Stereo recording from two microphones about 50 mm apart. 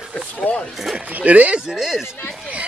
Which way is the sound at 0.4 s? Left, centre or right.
Left.